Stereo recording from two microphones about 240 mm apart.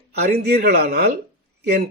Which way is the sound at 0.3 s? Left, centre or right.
Right.